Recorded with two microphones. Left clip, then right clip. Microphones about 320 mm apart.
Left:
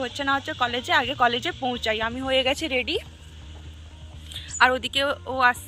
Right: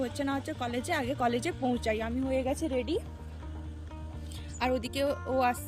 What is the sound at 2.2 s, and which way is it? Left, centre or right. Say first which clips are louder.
Speech: left 9 dB; left.